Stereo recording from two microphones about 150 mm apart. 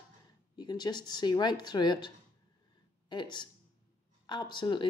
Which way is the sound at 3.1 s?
30° left (ahead or behind).